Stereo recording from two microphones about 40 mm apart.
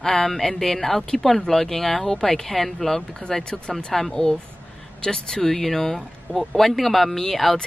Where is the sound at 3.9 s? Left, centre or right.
Centre.